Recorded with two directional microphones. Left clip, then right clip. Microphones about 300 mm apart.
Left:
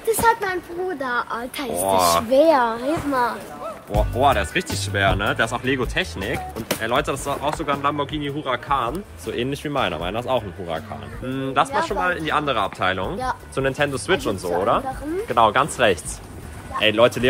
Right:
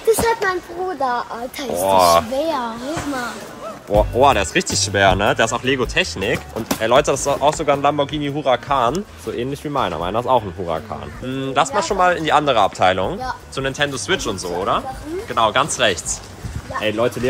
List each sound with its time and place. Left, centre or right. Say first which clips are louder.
1.7 s speech: right 5 dB; centre
2.3 s a child's voice: left 6 dB; left
3.9 s speech: right 5 dB; centre
13.6 s speech: right 1 dB; centre